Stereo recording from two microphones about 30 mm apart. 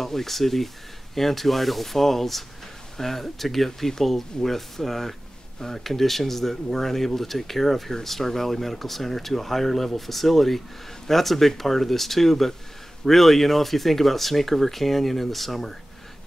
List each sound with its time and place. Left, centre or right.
0.0 s speech: centre